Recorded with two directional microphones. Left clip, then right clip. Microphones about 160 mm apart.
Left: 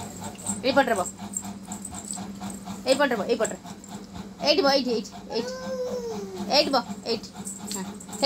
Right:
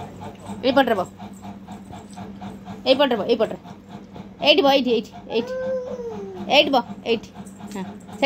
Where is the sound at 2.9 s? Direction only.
30° right (ahead or behind).